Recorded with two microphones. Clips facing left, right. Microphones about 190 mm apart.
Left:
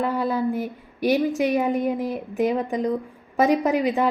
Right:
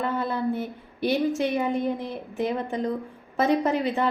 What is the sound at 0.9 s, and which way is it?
Speech, 15° left (ahead or behind).